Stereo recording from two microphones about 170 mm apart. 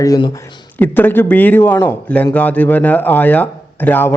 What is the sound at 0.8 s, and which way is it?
Speech, 10° left (ahead or behind).